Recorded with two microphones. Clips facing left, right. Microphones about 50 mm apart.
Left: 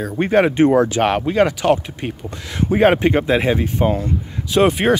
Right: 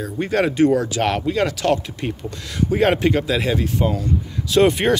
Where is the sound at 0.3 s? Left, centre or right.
Left.